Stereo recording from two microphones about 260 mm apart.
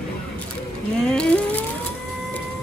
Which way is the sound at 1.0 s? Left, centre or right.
Centre.